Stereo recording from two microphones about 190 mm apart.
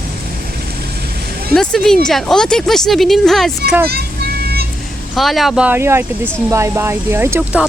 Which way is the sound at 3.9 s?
55° right (ahead or behind).